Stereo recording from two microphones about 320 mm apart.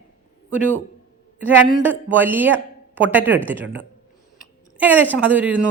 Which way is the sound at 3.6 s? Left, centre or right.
Right.